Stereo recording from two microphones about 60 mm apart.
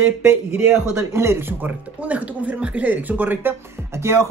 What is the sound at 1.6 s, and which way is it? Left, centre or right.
Speech, right.